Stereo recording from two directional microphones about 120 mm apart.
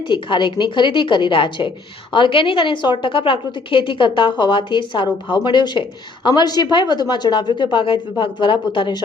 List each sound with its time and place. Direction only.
0.1 s a woman's voice: 40° left (ahead or behind)